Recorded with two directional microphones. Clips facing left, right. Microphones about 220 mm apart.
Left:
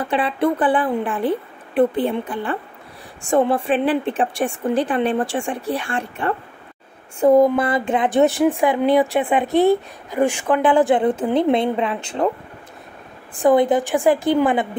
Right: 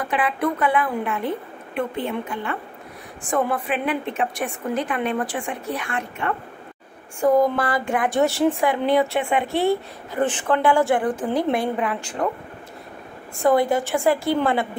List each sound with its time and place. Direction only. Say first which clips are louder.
0.0 s speech: left 3 dB; 30° left (ahead or behind)
13.4 s a woman's voice: left 3 dB; 20° left (ahead or behind)